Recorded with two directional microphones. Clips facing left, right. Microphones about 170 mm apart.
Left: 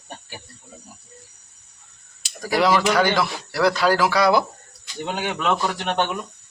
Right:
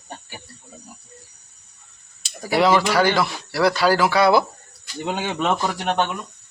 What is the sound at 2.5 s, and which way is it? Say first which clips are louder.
Speech: right 1 dB; centre (ahead or behind).